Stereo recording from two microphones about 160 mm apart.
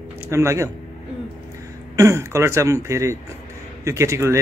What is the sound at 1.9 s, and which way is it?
A man's voice, 15° right (ahead or behind).